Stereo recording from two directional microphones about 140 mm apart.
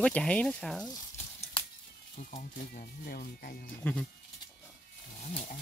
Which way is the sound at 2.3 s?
90° left.